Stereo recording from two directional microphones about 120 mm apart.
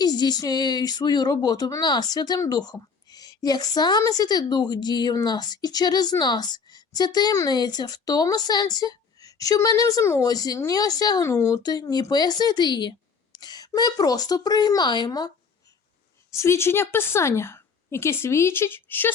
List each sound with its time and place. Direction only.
0.0 s a woman's voice: 35° left (ahead or behind)
16.4 s speech: 20° left (ahead or behind)